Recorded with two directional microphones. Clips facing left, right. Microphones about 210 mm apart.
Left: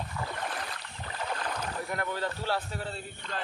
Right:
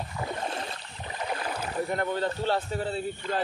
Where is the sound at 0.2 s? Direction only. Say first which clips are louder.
Right 5 dB; 25° right (ahead or behind).